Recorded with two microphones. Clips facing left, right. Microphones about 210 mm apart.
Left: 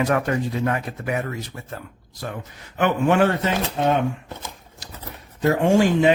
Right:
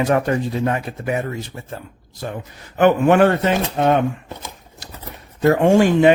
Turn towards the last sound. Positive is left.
turn(degrees=-60)  # may be behind; listen again after turning